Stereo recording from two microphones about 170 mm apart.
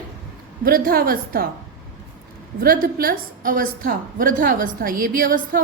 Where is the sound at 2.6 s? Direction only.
55° right (ahead or behind).